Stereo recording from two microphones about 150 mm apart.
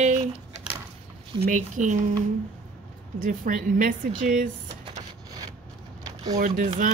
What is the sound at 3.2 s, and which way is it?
Speech, 65° right (ahead or behind).